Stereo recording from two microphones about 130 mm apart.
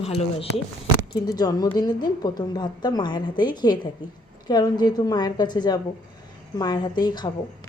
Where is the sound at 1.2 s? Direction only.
30° left (ahead or behind).